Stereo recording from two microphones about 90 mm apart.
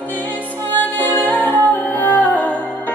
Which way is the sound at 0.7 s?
20° left (ahead or behind).